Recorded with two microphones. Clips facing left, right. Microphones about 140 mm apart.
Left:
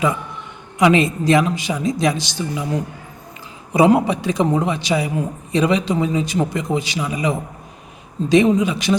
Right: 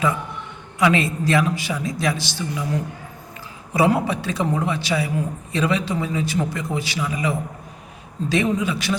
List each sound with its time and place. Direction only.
0.8 s a man's voice: 20° left (ahead or behind)
3.7 s a man's voice: 20° left (ahead or behind)